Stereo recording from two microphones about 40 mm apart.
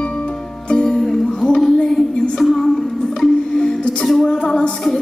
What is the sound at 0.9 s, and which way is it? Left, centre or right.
Music, centre.